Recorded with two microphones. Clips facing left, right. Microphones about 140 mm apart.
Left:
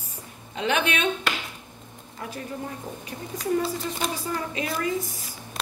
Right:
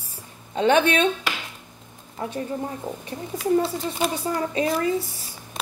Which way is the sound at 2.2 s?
30° right (ahead or behind).